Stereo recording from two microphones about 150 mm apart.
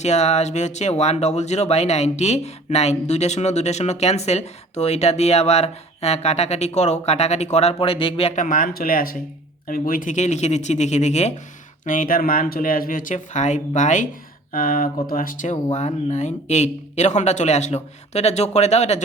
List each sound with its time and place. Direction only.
0.0 s speech: 50° left (ahead or behind)
8.4 s speech: 65° left (ahead or behind); by 11.3 s 50° left (ahead or behind)
11.9 s speech: 65° left (ahead or behind)
14.5 s speech: 70° left (ahead or behind); by 19.0 s 50° left (ahead or behind)